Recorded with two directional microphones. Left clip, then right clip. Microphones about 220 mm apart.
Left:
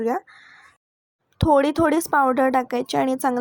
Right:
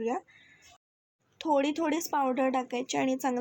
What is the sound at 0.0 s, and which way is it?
A woman's voice, 25° left (ahead or behind).